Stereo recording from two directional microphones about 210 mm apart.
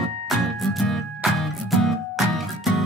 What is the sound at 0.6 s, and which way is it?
Music, centre (ahead or behind).